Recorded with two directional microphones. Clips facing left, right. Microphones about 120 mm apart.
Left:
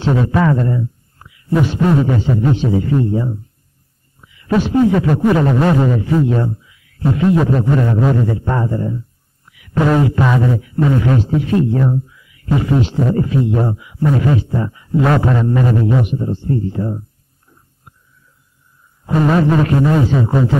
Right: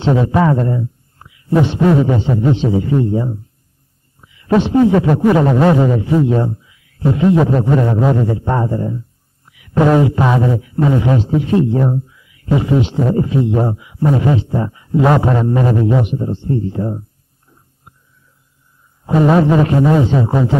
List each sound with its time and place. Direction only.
0.0 s a man's voice: 20° right (ahead or behind)
19.0 s a man's voice: 25° right (ahead or behind)